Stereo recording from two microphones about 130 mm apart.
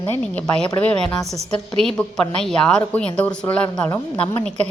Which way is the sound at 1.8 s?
5° left (ahead or behind).